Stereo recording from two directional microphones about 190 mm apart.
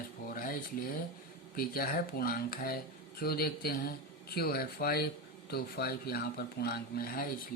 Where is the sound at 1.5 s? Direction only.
50° left (ahead or behind).